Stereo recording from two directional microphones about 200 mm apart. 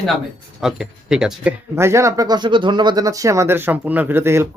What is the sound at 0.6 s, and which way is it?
Speech, centre (ahead or behind).